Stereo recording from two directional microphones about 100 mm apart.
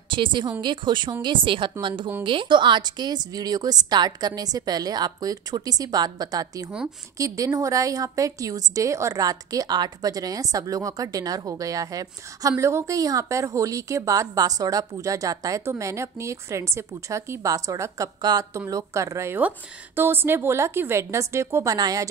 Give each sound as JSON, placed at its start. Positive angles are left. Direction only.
{"t": 0.1, "sound": "a woman's voice", "side_deg": -55}
{"t": 21.7, "sound": "a woman's voice", "side_deg": -40}